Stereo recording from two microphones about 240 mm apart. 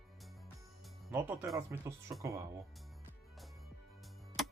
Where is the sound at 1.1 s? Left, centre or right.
Centre.